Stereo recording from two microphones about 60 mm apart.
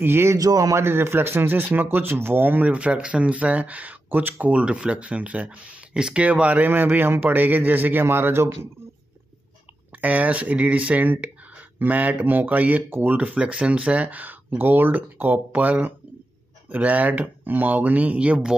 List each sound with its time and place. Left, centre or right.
0.0 s speech: right
0.4 s speech: right
0.7 s speech: right
6.7 s speech: right
9.9 s speech: right